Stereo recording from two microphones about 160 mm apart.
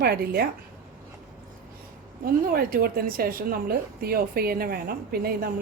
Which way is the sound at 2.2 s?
65° right (ahead or behind).